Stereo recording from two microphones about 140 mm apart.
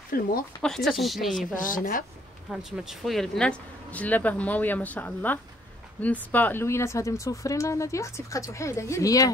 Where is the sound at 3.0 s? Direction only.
Centre (ahead or behind).